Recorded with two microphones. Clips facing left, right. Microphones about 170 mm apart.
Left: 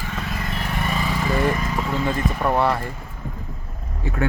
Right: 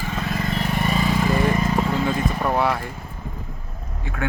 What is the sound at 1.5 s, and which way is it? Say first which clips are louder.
Vehicle: right 4 dB; 25° right (ahead or behind).